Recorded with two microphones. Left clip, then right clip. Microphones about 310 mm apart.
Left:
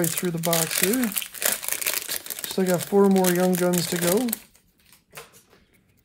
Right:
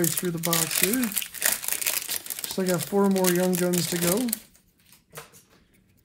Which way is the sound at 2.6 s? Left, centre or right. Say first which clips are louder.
Left 4 dB; left.